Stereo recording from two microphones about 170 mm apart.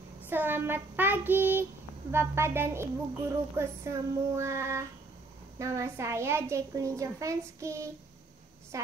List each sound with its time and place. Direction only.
0.3 s a woman's voice: 10° right (ahead or behind)